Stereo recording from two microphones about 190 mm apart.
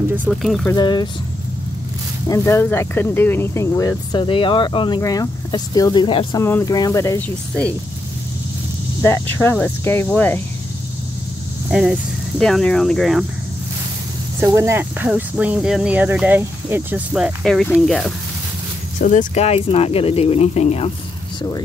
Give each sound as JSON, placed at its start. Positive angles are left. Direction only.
{"t": 0.1, "sound": "speech", "side_deg": -5}
{"t": 0.7, "sound": "speech", "side_deg": 20}
{"t": 2.2, "sound": "speech", "side_deg": 15}
{"t": 9.0, "sound": "speech", "side_deg": 10}
{"t": 11.7, "sound": "speech", "side_deg": -5}
{"t": 14.4, "sound": "speech", "side_deg": -15}
{"t": 18.9, "sound": "speech", "side_deg": 45}